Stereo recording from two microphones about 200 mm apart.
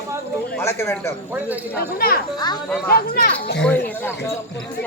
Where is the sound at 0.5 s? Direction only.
10° left (ahead or behind).